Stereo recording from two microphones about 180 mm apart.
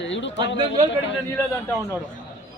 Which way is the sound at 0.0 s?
90° left.